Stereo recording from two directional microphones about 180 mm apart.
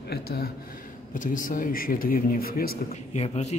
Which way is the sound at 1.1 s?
45° left (ahead or behind).